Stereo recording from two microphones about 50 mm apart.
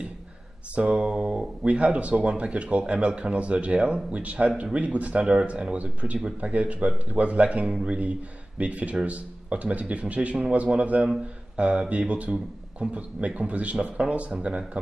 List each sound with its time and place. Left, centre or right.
0.7 s speech: centre
5.2 s speech: centre